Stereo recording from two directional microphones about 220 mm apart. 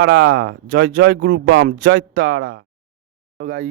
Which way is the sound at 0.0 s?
45° right (ahead or behind).